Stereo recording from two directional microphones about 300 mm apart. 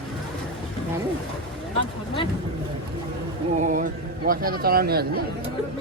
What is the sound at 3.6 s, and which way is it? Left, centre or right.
Speech, right.